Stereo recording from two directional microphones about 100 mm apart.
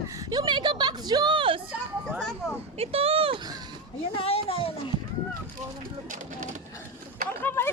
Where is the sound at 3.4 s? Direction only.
45° right (ahead or behind).